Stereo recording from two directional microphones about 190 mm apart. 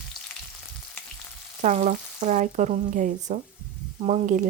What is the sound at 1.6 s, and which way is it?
Speech, 40° right (ahead or behind).